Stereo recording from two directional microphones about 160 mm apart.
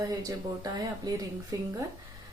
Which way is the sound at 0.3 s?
20° right (ahead or behind).